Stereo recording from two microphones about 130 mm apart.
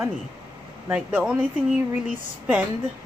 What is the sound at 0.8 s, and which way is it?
Speech, 10° right (ahead or behind).